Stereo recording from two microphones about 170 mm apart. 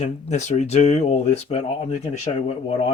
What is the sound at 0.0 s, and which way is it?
Speech, 40° left (ahead or behind).